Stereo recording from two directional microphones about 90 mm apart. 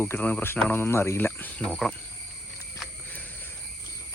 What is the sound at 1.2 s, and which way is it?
Cricket, 20° left (ahead or behind).